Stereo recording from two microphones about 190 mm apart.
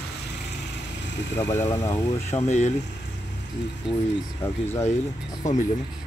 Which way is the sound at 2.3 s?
35° left (ahead or behind).